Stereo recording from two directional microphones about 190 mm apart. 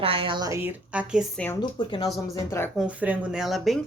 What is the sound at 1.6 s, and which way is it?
Speech, 20° left (ahead or behind).